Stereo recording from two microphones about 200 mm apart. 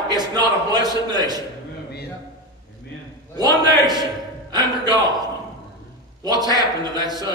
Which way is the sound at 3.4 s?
20° right (ahead or behind).